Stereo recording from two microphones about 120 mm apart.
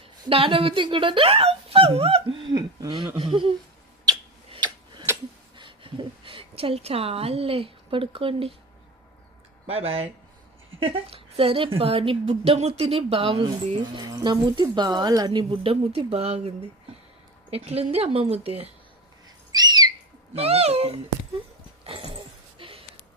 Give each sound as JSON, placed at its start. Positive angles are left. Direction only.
{"t": 0.3, "sound": "speech", "side_deg": -50}
{"t": 2.5, "sound": "a sound", "side_deg": -35}
{"t": 3.2, "sound": "speech", "side_deg": -45}
{"t": 5.5, "sound": "speech", "side_deg": -45}
{"t": 9.6, "sound": "a woman's voice", "side_deg": -55}
{"t": 12.2, "sound": "a woman's voice", "side_deg": -65}
{"t": 19.5, "sound": "bird", "side_deg": -35}
{"t": 20.3, "sound": "speech", "side_deg": -55}
{"t": 21.8, "sound": "a sound", "side_deg": -50}